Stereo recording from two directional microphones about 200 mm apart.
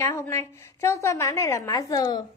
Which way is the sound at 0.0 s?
15° left (ahead or behind).